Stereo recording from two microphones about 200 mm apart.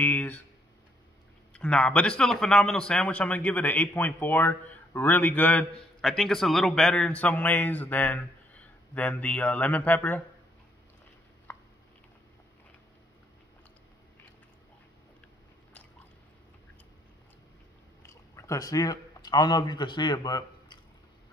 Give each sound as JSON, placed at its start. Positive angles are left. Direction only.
{"t": 0.0, "sound": "speech", "side_deg": 10}
{"t": 1.5, "sound": "a man's voice", "side_deg": 5}
{"t": 18.0, "sound": "speech", "side_deg": 15}